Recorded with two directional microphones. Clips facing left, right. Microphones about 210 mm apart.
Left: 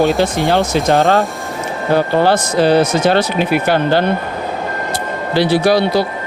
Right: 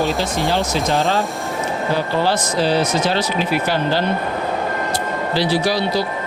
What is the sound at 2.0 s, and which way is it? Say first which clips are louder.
Speech: left 8 dB; 55° left (ahead or behind).